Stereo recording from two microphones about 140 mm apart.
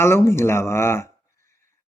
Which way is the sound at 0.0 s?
20° left (ahead or behind).